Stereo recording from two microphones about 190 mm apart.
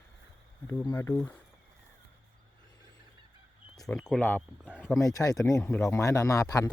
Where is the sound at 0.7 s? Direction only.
20° left (ahead or behind).